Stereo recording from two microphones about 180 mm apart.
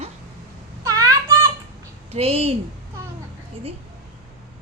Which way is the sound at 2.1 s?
35° right (ahead or behind).